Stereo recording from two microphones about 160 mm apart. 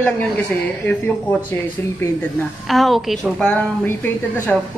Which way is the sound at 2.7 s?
Centre (ahead or behind).